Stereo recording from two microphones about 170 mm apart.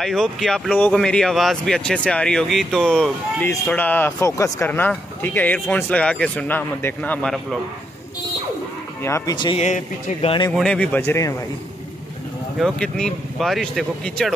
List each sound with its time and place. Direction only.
0.0 s speech: centre (ahead or behind)
9.0 s speech: 20° left (ahead or behind)
9.6 s speech: 45° left (ahead or behind)
10.5 s speech: 5° left (ahead or behind)
12.5 s speech: 5° left (ahead or behind)